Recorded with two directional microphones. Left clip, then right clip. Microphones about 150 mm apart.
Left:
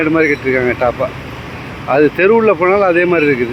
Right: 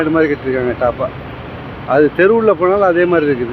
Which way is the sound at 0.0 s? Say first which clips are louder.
Left 1 dB; 15° left (ahead or behind).